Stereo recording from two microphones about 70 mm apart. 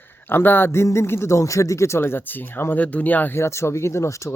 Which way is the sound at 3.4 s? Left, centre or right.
Left.